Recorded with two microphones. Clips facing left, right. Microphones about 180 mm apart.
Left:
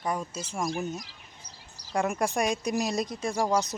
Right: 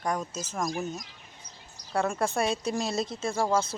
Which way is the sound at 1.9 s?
15° left (ahead or behind).